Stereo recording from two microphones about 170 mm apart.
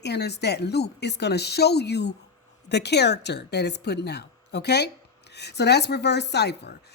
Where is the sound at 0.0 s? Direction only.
80° left.